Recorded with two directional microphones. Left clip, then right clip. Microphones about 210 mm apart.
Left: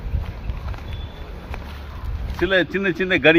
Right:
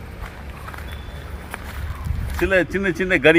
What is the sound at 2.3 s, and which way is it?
Speech, 10° right (ahead or behind).